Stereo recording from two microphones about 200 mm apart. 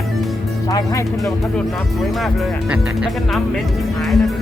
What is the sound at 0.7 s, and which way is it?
Speech, 15° left (ahead or behind).